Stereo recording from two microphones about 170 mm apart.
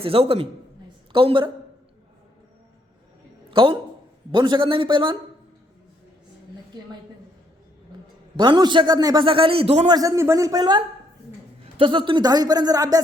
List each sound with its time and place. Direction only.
0.0 s a man's voice: 35° right (ahead or behind)
3.5 s a man's voice: 30° right (ahead or behind)
8.4 s a man's voice: 25° right (ahead or behind)
9.9 s a man's voice: 20° right (ahead or behind)